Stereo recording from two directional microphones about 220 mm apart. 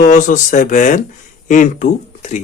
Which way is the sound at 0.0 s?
35° left (ahead or behind).